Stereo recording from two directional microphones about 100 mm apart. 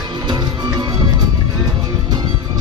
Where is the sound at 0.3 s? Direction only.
45° right (ahead or behind).